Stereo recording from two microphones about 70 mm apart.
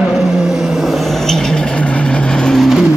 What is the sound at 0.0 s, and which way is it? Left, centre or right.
Vehicle, centre.